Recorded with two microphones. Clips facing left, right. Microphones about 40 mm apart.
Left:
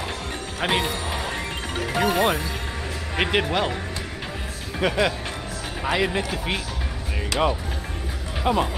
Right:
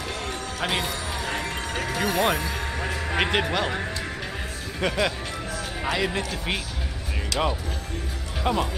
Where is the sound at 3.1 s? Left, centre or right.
Centre.